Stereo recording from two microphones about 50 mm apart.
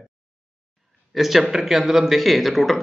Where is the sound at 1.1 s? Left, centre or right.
Centre.